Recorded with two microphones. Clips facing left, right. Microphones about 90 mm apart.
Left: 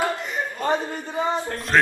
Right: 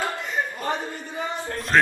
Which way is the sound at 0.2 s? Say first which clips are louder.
Left 1 dB; 20° left (ahead or behind).